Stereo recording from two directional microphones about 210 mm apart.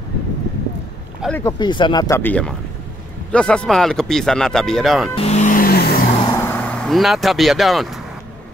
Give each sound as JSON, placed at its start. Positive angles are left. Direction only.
{"t": 1.2, "sound": "speech", "side_deg": 5}
{"t": 1.6, "sound": "speech", "side_deg": 20}
{"t": 5.1, "sound": "vehicle", "side_deg": 30}
{"t": 6.2, "sound": "vehicle", "side_deg": 10}